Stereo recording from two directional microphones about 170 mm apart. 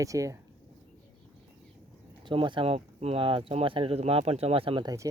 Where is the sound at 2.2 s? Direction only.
30° right (ahead or behind).